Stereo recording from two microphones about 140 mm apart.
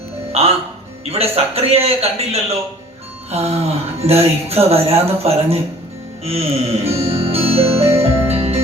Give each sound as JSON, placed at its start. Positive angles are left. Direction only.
{"t": 0.4, "sound": "speech", "side_deg": -45}
{"t": 6.2, "sound": "music", "side_deg": -45}